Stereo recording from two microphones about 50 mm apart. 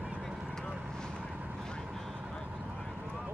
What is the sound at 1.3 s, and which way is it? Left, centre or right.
Artillery fire, right.